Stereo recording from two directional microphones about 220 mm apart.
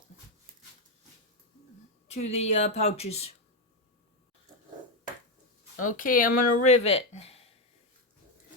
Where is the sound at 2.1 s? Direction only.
30° left (ahead or behind).